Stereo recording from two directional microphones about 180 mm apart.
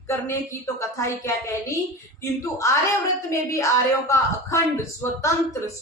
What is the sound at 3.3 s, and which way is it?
Speech, 15° left (ahead or behind).